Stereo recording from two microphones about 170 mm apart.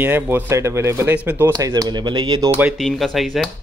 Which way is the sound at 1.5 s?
20° right (ahead or behind).